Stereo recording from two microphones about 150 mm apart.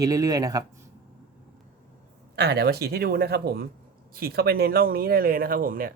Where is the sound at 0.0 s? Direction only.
25° right (ahead or behind).